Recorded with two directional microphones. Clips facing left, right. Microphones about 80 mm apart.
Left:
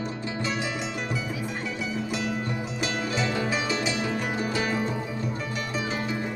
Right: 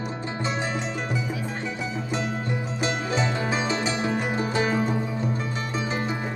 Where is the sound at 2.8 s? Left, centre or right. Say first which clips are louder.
Right 2 dB; right.